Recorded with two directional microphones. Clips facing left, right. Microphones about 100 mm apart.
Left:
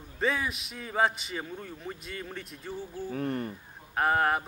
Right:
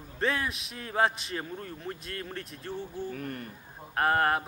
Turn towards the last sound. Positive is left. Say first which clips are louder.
# even
turn(degrees=0)  # may be behind; listen again after turning